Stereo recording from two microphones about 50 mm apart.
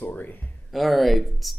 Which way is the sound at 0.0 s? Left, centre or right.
Left.